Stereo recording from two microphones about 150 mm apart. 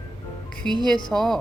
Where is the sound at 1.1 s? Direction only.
Centre (ahead or behind).